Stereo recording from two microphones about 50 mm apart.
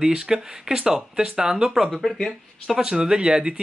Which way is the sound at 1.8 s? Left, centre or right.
Centre.